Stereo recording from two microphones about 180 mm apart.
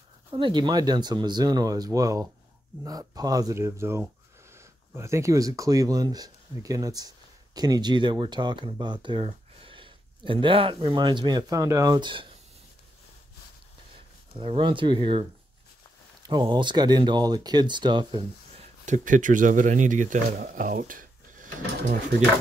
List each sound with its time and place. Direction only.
0.3 s speech: 25° right (ahead or behind)
14.3 s speech: 30° right (ahead or behind)
18.9 s speech: 45° right (ahead or behind)